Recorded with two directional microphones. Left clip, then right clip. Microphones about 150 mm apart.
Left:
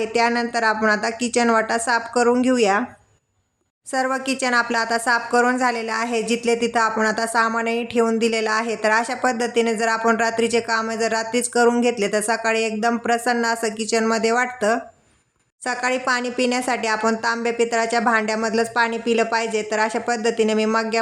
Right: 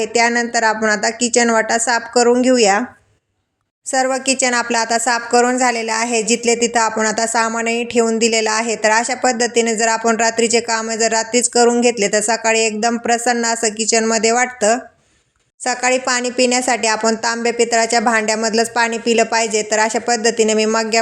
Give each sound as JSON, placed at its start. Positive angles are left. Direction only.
{"t": 0.0, "sound": "speech", "side_deg": -10}
{"t": 3.9, "sound": "speech", "side_deg": -15}